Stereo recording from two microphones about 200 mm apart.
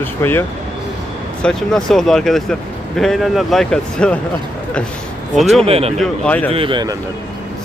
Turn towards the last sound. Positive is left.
turn(degrees=-25)  # may be behind; listen again after turning